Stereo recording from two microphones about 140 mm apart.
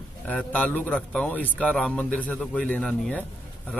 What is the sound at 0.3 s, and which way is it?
Speech, 10° left (ahead or behind).